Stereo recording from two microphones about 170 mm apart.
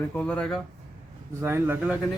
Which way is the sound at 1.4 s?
15° right (ahead or behind).